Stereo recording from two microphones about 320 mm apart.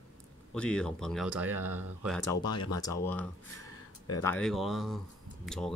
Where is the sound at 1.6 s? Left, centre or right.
Right.